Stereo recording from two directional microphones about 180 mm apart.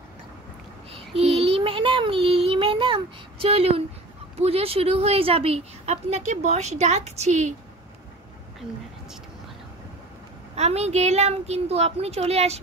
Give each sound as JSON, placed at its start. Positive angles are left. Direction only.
{"t": 0.9, "sound": "child singing", "side_deg": -35}
{"t": 4.4, "sound": "a woman's voice", "side_deg": -35}
{"t": 10.5, "sound": "a woman's voice", "side_deg": -35}